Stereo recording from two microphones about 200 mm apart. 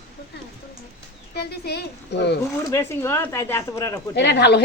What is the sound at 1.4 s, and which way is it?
A woman's voice, 55° left (ahead or behind).